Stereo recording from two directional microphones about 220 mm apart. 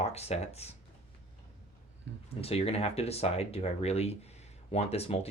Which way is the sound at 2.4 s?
25° left (ahead or behind).